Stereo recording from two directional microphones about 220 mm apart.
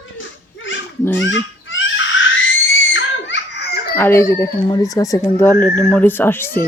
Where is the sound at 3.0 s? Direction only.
55° left (ahead or behind).